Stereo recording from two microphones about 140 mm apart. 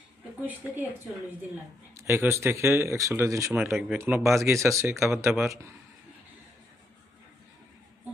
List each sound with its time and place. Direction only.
0.4 s speech: 15° right (ahead or behind)